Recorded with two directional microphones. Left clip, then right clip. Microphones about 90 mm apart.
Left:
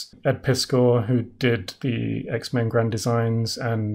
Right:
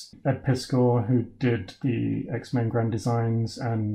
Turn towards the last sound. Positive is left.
turn(degrees=15)  # may be behind; listen again after turning